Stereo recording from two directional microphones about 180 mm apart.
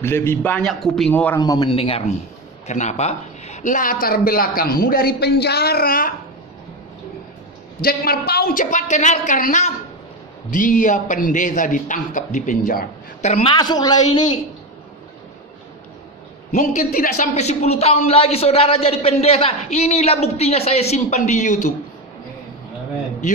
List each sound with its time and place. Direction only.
0.0 s a man's voice: 15° left (ahead or behind)
1.4 s a man's voice: 25° left (ahead or behind); by 6.1 s 50° left (ahead or behind)
7.8 s speech: 55° left (ahead or behind); by 13.6 s 35° left (ahead or behind)
13.6 s a man's voice: 20° left (ahead or behind)
16.5 s a woman's voice: 50° left (ahead or behind)